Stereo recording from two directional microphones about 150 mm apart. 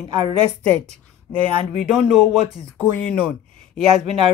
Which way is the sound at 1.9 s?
5° left (ahead or behind).